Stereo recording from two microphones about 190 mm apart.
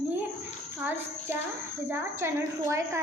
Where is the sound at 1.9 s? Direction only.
15° right (ahead or behind).